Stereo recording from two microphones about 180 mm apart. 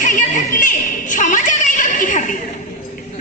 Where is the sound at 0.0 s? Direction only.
50° left (ahead or behind).